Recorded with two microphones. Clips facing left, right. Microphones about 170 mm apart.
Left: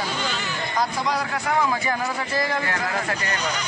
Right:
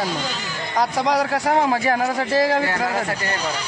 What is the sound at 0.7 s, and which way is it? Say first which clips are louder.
A man's voice: right 6 dB; 75° right (ahead or behind).